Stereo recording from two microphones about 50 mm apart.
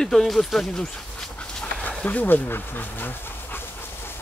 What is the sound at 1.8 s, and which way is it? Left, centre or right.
Speech, left.